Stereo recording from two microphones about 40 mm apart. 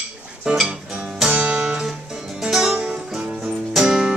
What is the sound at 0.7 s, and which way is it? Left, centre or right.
Music, right.